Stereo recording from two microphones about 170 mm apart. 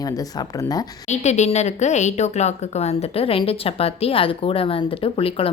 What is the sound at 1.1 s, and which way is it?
Speech, 40° left (ahead or behind).